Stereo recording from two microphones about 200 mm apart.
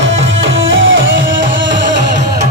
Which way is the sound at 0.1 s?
70° right (ahead or behind).